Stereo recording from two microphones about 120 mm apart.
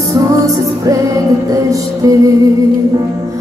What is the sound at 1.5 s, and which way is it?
Music, 30° right (ahead or behind).